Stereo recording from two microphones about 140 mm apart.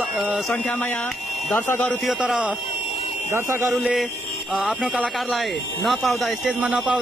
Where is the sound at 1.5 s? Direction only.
10° left (ahead or behind).